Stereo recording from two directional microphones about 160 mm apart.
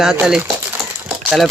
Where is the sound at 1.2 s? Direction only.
Centre (ahead or behind).